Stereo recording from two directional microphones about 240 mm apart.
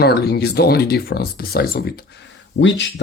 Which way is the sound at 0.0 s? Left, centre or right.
Left.